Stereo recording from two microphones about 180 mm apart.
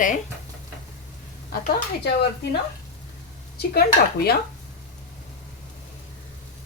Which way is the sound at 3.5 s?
60° left (ahead or behind).